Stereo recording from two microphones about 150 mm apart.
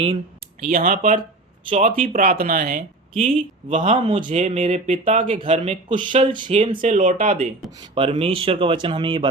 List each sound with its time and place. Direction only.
0.7 s speech: 65° right (ahead or behind)
3.1 s speech: 40° right (ahead or behind)
6.5 s speech: 45° right (ahead or behind)
6.7 s speech: 60° right (ahead or behind)
7.8 s speech: 35° right (ahead or behind)